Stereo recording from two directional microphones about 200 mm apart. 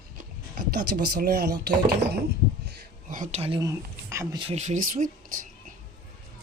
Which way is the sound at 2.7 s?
40° right (ahead or behind).